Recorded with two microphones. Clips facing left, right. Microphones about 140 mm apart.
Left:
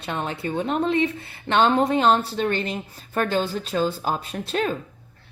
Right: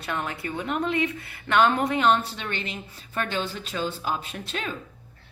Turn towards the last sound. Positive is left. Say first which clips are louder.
# left 8 dB
turn(degrees=40)  # may be behind; listen again after turning